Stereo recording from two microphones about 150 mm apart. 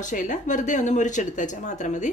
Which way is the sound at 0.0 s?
55° left (ahead or behind).